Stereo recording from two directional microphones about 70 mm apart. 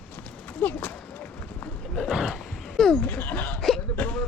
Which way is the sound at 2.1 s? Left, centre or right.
Centre.